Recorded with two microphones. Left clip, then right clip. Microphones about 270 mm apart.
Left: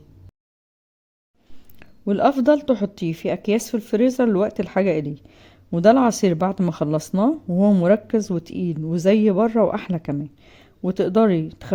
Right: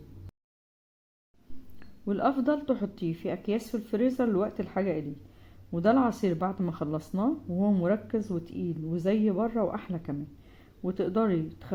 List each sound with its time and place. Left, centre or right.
1.8 s speech: left